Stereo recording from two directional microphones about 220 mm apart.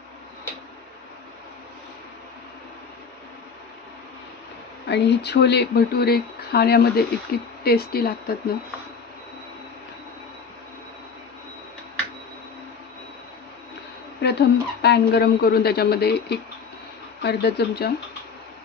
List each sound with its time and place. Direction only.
4.8 s speech: 50° left (ahead or behind)
14.2 s speech: 50° left (ahead or behind)